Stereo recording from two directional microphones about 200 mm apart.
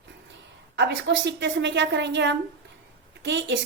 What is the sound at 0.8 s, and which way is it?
A woman's voice, 60° right (ahead or behind).